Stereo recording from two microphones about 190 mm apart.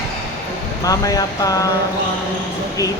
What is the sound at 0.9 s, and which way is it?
Speech, 20° left (ahead or behind).